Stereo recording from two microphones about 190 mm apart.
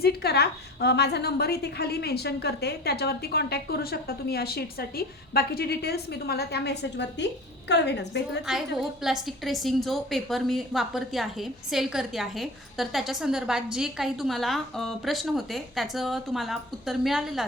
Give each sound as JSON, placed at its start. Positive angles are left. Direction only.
{"t": 0.0, "sound": "a woman's voice", "side_deg": 55}
{"t": 8.4, "sound": "a woman's voice", "side_deg": 0}